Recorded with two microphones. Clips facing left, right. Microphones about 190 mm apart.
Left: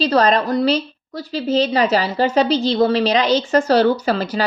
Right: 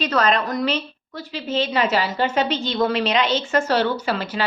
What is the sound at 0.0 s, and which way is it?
A woman's voice, 35° left (ahead or behind).